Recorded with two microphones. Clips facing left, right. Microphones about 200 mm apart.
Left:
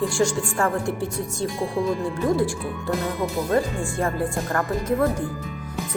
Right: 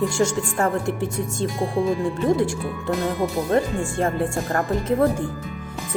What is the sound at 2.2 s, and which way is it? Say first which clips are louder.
Speech: right 1 dB; 25° right (ahead or behind).